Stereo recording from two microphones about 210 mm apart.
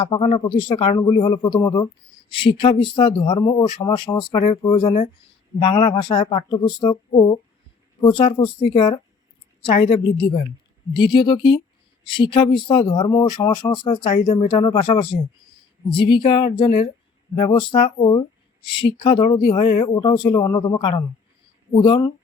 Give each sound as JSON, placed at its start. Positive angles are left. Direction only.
{"t": 0.0, "sound": "speech", "side_deg": 25}